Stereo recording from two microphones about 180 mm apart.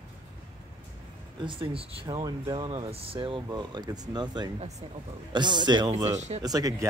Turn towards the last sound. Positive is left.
turn(degrees=-20)  # may be behind; listen again after turning